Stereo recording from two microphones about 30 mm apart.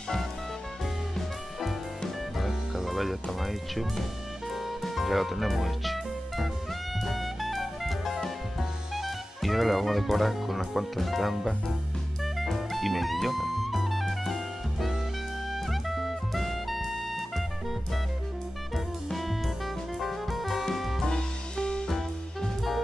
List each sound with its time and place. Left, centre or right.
1.1 s music: centre
8.5 s speech: centre
12.4 s music: centre
19.0 s music: centre
21.0 s music: left
21.8 s music: centre